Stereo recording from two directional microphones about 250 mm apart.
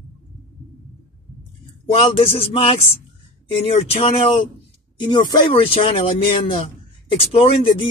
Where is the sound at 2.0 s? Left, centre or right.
Left.